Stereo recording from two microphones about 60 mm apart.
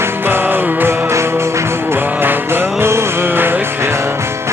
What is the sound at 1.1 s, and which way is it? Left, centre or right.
Music, right.